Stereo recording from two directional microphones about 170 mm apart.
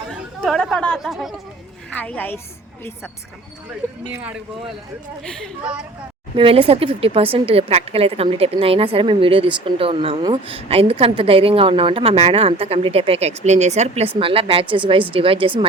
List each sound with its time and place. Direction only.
0.2 s a woman's voice: centre (ahead or behind)
6.3 s speech: 35° right (ahead or behind)